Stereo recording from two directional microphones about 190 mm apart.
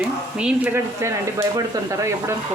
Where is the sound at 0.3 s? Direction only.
5° right (ahead or behind).